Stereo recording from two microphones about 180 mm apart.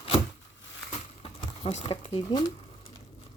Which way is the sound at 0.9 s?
30° left (ahead or behind).